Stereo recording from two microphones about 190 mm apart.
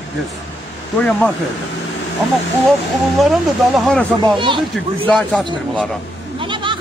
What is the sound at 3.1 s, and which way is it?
Speech, centre (ahead or behind).